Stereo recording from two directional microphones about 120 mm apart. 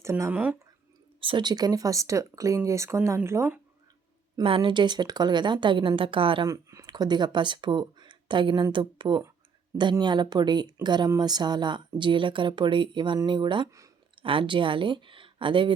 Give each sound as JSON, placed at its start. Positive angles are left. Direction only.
{"t": 0.0, "sound": "speech", "side_deg": -25}
{"t": 1.2, "sound": "speech", "side_deg": -40}
{"t": 4.4, "sound": "speech", "side_deg": -45}
{"t": 6.5, "sound": "speech", "side_deg": -25}
{"t": 13.7, "sound": "speech", "side_deg": -25}
{"t": 14.2, "sound": "speech", "side_deg": -45}